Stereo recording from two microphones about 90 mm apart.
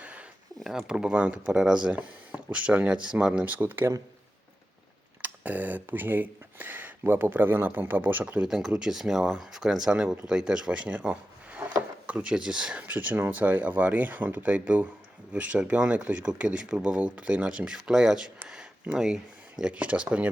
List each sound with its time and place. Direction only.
0.0 s a sound: 15° right (ahead or behind)
0.6 s speech: 5° right (ahead or behind); by 3.8 s 20° right (ahead or behind)
5.2 s speech: 15° right (ahead or behind)